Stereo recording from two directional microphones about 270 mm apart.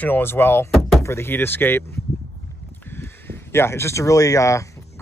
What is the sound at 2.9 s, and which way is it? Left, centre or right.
Speech, centre.